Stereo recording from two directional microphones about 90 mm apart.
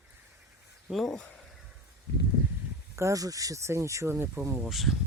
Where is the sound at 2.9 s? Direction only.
35° right (ahead or behind).